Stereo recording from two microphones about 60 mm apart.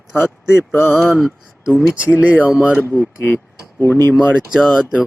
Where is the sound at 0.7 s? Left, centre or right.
Left.